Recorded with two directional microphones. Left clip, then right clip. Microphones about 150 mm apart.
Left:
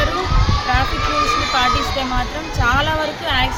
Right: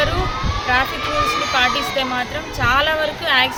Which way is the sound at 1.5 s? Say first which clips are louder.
Even; 15° right (ahead or behind).